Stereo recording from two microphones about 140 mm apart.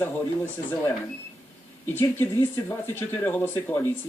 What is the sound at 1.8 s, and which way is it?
Speech, 15° left (ahead or behind).